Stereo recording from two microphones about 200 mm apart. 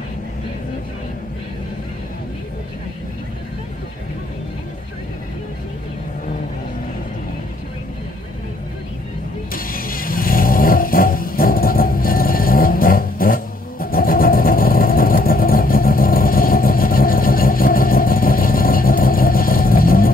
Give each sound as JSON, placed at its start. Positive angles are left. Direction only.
{"t": 9.5, "sound": "vehicle", "side_deg": 45}